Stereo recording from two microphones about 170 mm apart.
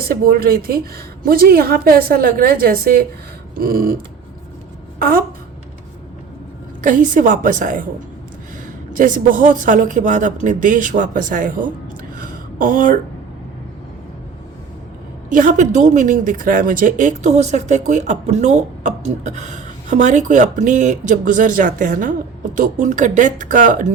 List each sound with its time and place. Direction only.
0.0 s a woman's voice: 60° right (ahead or behind)
4.9 s a sound: 60° right (ahead or behind)
6.8 s speech: 50° right (ahead or behind)
9.0 s speech: 50° right (ahead or behind)
12.2 s a sound: 55° right (ahead or behind)
15.3 s speech: 50° right (ahead or behind)